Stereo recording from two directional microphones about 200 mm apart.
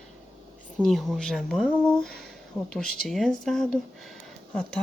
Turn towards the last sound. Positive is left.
turn(degrees=5)  # may be behind; listen again after turning